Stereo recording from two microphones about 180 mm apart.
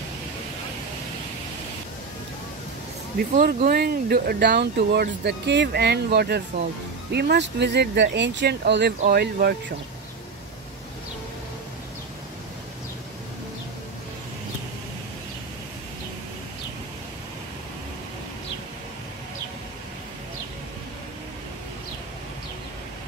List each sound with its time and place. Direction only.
3.2 s speech: 50° right (ahead or behind)